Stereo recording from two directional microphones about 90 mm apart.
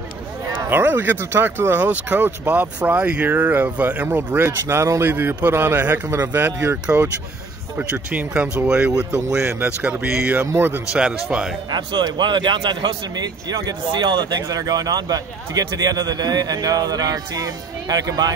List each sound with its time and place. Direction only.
0.7 s speech: 25° right (ahead or behind)
6.0 s speech: 40° right (ahead or behind)
6.3 s speech: 20° right (ahead or behind)
10.4 s speech: 30° right (ahead or behind)
10.9 s speech: 10° right (ahead or behind)
11.7 s speech: 50° right (ahead or behind)
14.4 s a man's voice: 40° right (ahead or behind)